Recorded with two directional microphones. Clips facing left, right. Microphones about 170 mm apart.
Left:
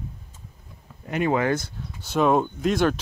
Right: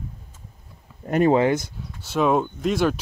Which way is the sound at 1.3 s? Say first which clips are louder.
Right 3 dB; 20° right (ahead or behind).